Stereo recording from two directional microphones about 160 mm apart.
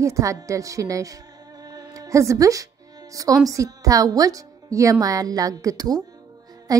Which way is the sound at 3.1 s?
20° right (ahead or behind).